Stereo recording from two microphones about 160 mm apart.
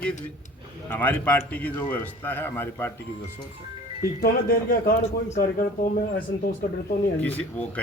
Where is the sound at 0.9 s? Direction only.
10° left (ahead or behind).